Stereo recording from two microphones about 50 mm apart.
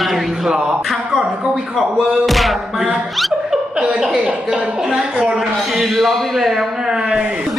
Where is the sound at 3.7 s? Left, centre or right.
Centre.